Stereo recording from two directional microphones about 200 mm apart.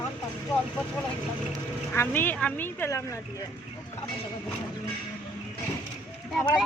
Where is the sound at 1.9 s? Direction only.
10° left (ahead or behind).